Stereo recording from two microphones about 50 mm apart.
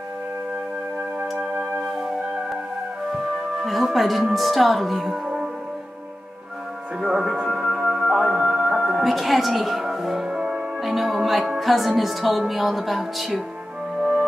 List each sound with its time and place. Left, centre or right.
3.1 s speech: centre
7.0 s music: centre
10.2 s music: centre
10.8 s speech: centre